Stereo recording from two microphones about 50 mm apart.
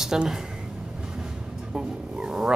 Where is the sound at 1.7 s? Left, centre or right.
Centre.